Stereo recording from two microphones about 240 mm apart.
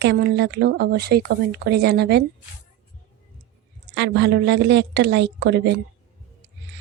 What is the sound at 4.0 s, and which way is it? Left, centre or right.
A woman's voice, right.